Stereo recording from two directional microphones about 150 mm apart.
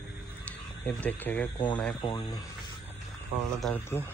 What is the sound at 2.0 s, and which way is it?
Speech, 35° left (ahead or behind).